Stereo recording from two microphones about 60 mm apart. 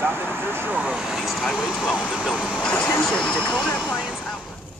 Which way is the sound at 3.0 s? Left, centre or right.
Centre.